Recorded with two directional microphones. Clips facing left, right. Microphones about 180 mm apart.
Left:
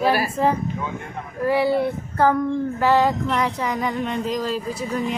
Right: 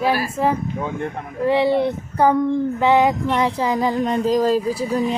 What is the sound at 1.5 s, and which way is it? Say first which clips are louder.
Child singing: right 2 dB; 20° right (ahead or behind).